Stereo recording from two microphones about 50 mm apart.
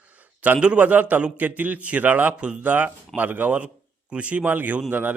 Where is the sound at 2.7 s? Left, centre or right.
Right.